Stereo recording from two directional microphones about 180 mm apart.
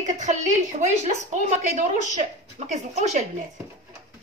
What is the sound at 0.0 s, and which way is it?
A woman's voice, 40° right (ahead or behind).